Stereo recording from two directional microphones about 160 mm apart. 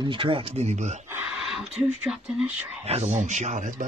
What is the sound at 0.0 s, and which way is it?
Speech, 30° right (ahead or behind).